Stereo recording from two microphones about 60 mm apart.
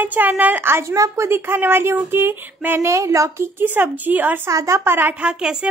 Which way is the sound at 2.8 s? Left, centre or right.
Right.